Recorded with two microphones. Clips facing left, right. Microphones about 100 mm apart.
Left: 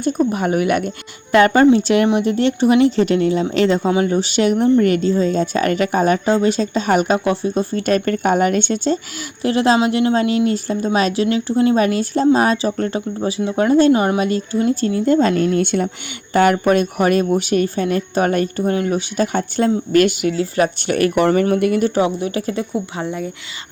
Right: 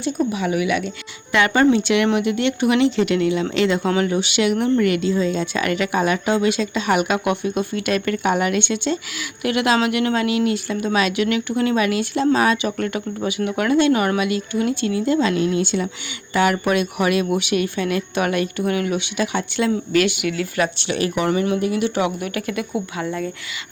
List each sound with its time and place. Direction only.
0.0 s speech: 45° left (ahead or behind)
3.8 s speech: 20° left (ahead or behind)
4.1 s speech: 40° left (ahead or behind)
20.7 s speech: 50° left (ahead or behind); by 22.6 s 30° left (ahead or behind)